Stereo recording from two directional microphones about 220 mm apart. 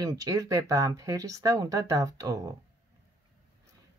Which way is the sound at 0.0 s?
15° right (ahead or behind).